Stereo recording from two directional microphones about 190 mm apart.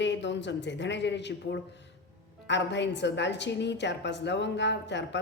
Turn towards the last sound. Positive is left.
turn(degrees=70)  # may be behind; listen again after turning